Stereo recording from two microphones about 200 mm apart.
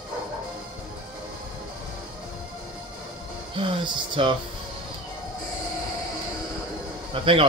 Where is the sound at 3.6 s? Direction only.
25° right (ahead or behind).